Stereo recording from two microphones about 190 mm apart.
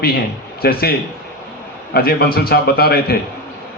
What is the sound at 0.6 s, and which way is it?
A man's voice, 55° left (ahead or behind).